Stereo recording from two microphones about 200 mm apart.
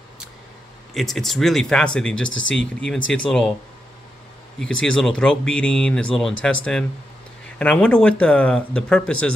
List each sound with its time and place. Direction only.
0.9 s speech: centre (ahead or behind)
2.2 s speech: 70° left (ahead or behind)
3.1 s speech: 5° left (ahead or behind)
4.6 s speech: 75° left (ahead or behind)
4.9 s speech: 5° left (ahead or behind)